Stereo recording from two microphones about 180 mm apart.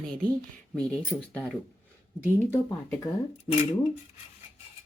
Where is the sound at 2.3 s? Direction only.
15° left (ahead or behind).